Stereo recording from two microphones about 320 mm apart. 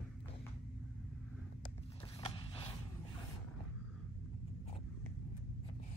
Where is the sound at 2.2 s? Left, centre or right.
Centre.